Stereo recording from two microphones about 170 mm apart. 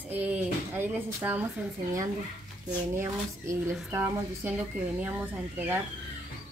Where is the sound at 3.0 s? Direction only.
15° right (ahead or behind).